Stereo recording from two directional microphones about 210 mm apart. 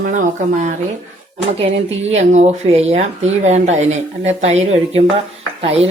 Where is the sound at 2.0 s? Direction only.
30° right (ahead or behind).